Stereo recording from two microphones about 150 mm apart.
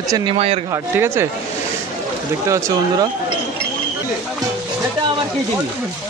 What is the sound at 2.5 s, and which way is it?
Speech, 20° right (ahead or behind).